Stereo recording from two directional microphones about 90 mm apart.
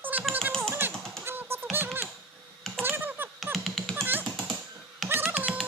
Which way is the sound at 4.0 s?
20° right (ahead or behind).